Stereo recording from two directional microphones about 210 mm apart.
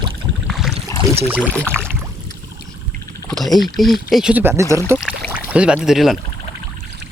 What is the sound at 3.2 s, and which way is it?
Speech, centre (ahead or behind).